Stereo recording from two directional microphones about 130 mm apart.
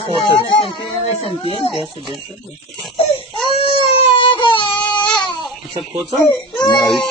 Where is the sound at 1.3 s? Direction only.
45° left (ahead or behind).